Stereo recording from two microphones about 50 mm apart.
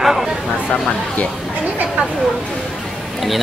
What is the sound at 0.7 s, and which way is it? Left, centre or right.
Speech, left.